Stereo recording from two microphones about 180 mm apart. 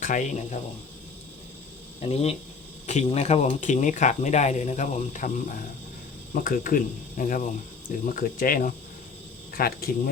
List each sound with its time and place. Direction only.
0.0 s speech: 45° left (ahead or behind)
2.0 s speech: 35° left (ahead or behind); by 9.9 s 55° left (ahead or behind)